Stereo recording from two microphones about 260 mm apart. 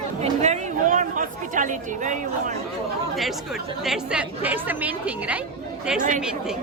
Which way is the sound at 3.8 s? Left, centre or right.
Centre.